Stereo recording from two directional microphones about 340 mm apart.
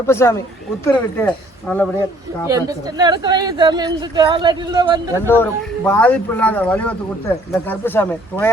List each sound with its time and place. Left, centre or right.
0.0 s speech: centre
2.5 s a woman's voice: centre
5.2 s speech: centre